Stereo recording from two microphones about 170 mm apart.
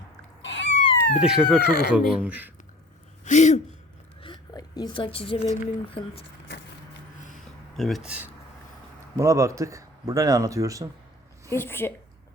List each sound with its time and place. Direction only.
0.4 s cat: 90° left
1.2 s speech: 5° right (ahead or behind)
1.6 s speech: 70° left (ahead or behind)
1.9 s speech: 5° right (ahead or behind)
3.2 s a sound: 45° left (ahead or behind)
4.2 s speech: 25° left (ahead or behind)
7.8 s speech: centre (ahead or behind)
9.1 s speech: 15° right (ahead or behind)
11.5 s a woman's voice: 15° left (ahead or behind)